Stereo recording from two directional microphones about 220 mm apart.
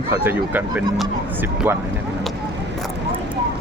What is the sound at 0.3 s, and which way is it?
Speech, 10° right (ahead or behind).